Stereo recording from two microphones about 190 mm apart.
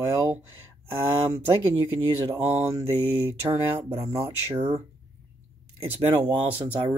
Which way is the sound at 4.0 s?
15° right (ahead or behind).